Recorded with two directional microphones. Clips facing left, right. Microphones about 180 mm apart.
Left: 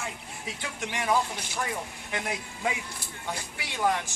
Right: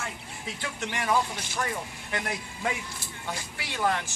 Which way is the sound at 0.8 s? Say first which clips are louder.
Even; 15° left (ahead or behind).